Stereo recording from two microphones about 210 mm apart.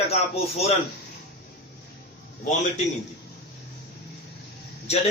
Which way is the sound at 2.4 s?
35° left (ahead or behind).